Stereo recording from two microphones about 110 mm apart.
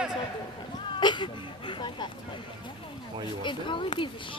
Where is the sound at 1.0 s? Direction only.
45° left (ahead or behind).